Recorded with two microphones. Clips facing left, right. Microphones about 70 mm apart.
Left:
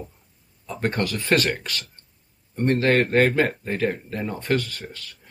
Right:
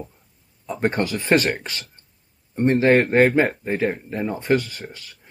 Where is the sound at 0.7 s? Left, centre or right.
Centre.